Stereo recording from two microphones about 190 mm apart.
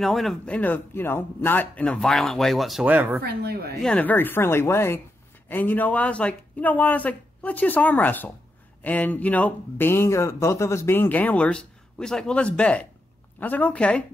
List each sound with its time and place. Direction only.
0.0 s speech: centre (ahead or behind)
3.2 s speech: 55° right (ahead or behind)
3.7 s speech: 5° left (ahead or behind)